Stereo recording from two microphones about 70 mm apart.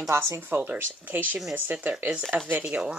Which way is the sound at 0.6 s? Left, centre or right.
Right.